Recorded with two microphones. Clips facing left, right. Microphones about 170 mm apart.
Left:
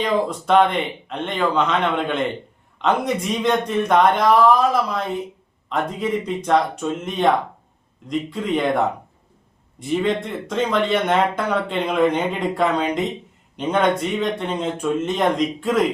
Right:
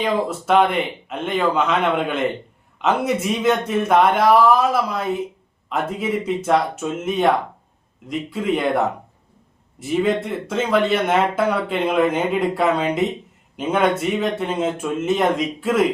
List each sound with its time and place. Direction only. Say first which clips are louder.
0.0 s speech: even; 5° right (ahead or behind)
9.8 s speech: right 1 dB; 5° right (ahead or behind)